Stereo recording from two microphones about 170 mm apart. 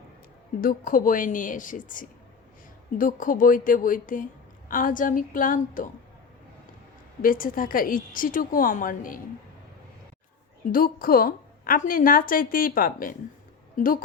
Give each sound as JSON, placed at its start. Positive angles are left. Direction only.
{"t": 0.6, "sound": "a woman's voice", "side_deg": 55}
{"t": 7.2, "sound": "a woman's voice", "side_deg": 55}
{"t": 10.7, "sound": "a woman's voice", "side_deg": 55}